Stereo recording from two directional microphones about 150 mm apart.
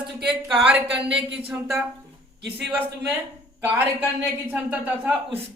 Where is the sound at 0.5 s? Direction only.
5° right (ahead or behind).